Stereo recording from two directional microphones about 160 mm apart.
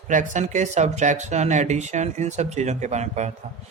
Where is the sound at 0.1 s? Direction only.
50° right (ahead or behind).